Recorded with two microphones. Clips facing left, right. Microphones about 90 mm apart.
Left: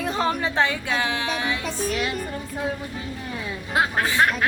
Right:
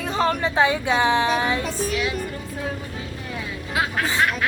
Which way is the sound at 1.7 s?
Centre (ahead or behind).